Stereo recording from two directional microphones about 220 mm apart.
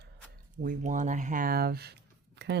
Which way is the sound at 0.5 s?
40° right (ahead or behind).